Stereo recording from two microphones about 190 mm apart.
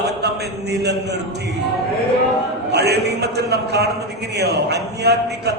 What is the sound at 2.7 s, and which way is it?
A man's voice, 60° right (ahead or behind).